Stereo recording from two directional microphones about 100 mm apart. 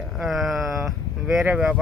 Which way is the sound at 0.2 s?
Centre (ahead or behind).